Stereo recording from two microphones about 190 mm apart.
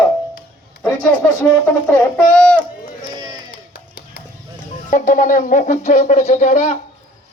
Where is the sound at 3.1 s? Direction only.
20° right (ahead or behind).